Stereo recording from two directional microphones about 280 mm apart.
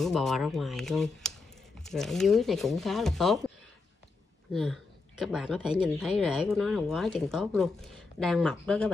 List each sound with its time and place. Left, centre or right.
0.0 s speech: centre
4.5 s a woman's voice: centre